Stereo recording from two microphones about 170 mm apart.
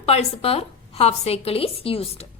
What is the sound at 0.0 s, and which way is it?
A woman's voice, 35° left (ahead or behind).